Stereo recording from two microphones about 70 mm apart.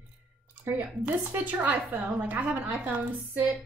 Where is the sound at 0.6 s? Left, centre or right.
Right.